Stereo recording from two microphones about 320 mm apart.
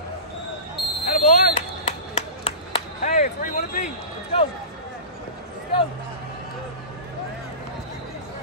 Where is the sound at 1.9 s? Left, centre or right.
Centre.